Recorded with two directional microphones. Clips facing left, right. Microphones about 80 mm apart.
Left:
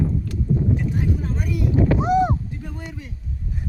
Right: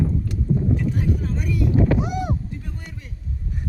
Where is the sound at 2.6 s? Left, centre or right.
Left.